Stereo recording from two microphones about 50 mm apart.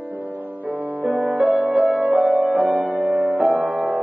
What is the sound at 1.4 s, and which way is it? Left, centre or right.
Music, centre.